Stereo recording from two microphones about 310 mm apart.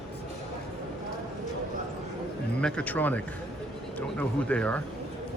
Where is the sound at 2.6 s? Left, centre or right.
Centre.